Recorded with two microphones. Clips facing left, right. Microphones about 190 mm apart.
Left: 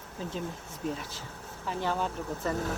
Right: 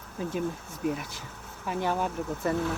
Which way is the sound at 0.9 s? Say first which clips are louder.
Right 3 dB; 15° right (ahead or behind).